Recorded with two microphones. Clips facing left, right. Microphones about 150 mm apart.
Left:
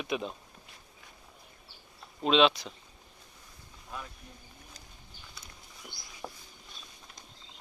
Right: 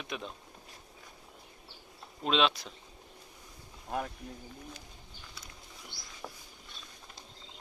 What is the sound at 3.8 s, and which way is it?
Speech, 60° right (ahead or behind).